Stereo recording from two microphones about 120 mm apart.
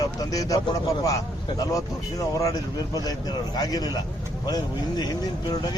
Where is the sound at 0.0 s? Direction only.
30° left (ahead or behind).